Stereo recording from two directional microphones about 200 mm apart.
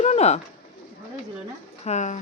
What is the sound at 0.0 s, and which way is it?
Bird, 35° left (ahead or behind).